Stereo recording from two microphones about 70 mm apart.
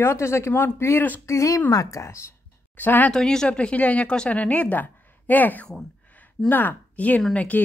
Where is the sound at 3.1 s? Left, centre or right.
Centre.